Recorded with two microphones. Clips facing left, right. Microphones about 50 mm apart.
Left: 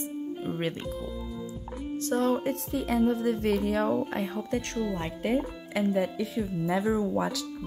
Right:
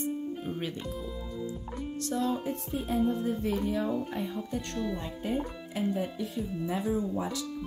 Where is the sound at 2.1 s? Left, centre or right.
Left.